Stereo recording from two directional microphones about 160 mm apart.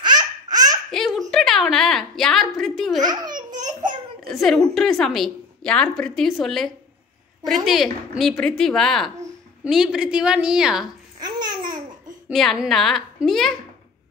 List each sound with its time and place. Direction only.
0.0 s laughter: 25° right (ahead or behind)
0.9 s a sound: centre (ahead or behind)
3.0 s babbling: 25° right (ahead or behind)
4.3 s a woman's voice: centre (ahead or behind)
11.1 s babbling: 25° right (ahead or behind)
12.3 s a woman's voice: centre (ahead or behind)